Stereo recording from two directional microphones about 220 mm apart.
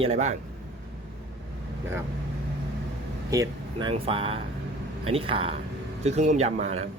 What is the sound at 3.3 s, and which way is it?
Speech, 20° right (ahead or behind).